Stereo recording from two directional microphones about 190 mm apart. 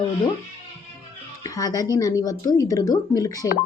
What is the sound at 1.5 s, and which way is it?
A woman's voice, 20° left (ahead or behind).